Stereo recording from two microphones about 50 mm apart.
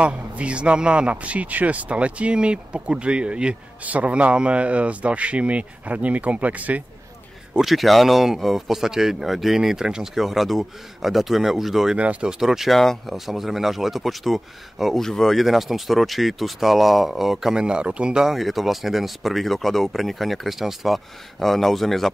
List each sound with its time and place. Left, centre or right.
0.0 s a man's voice: right
7.6 s speech: centre
12.0 s a man's voice: right
12.3 s speech: centre
12.7 s speech: centre
13.1 s speech: centre
15.0 s speech: centre
15.4 s speech: centre
18.4 s speech: centre